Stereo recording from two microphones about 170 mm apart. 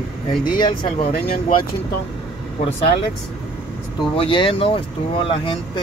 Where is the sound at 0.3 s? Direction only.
25° left (ahead or behind).